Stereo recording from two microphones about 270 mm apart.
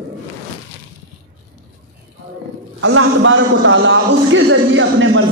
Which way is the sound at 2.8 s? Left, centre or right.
Right.